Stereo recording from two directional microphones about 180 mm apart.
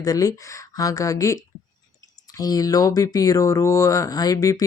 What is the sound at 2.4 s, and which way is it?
Speech, 20° left (ahead or behind).